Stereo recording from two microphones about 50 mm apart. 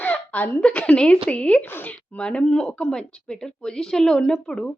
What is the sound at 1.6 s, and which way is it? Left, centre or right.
Speech, left.